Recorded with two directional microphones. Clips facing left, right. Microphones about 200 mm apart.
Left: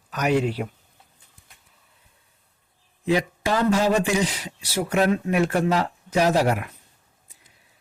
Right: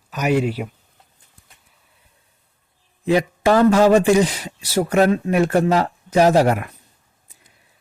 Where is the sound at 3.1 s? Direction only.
50° right (ahead or behind).